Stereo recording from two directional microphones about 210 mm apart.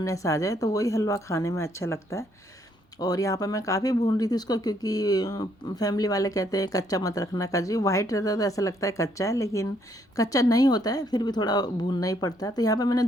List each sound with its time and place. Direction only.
0.0 s speech: 15° left (ahead or behind)